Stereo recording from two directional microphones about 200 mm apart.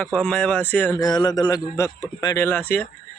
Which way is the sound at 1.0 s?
20° left (ahead or behind).